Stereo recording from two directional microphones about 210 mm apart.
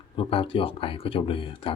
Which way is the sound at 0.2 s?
25° left (ahead or behind).